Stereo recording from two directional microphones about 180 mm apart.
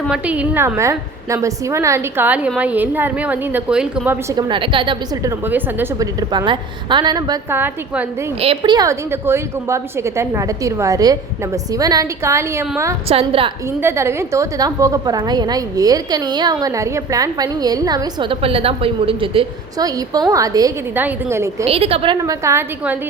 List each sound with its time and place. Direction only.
0.1 s a woman's voice: 10° right (ahead or behind)
4.4 s a woman's voice: 25° right (ahead or behind)
5.5 s a woman's voice: 10° right (ahead or behind)
7.5 s a woman's voice: 10° right (ahead or behind)
8.4 s a woman's voice: 30° right (ahead or behind)
13.1 s a woman's voice: 30° right (ahead or behind)
13.8 s a woman's voice: 15° right (ahead or behind)
21.6 s a woman's voice: 35° right (ahead or behind); by 23.0 s 10° right (ahead or behind)